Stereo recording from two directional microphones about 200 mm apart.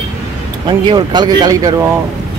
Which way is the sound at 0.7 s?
25° right (ahead or behind).